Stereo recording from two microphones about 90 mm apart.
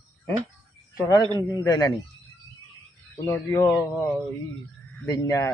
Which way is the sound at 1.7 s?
45° left (ahead or behind).